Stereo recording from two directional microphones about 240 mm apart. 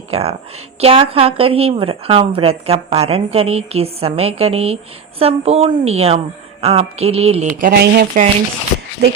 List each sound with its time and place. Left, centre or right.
0.1 s a woman's voice: right